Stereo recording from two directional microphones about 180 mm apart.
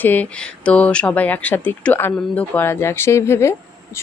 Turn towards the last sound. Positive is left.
turn(degrees=15)  # may be behind; listen again after turning